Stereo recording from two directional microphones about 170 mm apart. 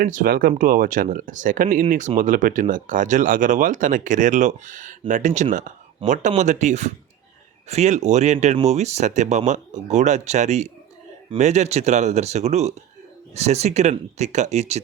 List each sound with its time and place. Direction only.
0.0 s speech: 50° right (ahead or behind)